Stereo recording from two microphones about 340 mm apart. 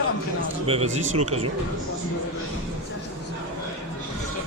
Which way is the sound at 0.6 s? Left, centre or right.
Centre.